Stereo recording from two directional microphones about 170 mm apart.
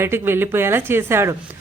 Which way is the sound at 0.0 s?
15° right (ahead or behind).